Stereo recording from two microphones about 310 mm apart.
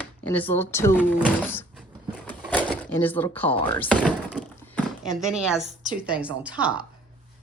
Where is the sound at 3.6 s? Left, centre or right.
Centre.